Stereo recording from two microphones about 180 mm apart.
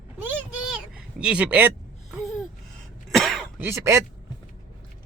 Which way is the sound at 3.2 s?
Centre (ahead or behind).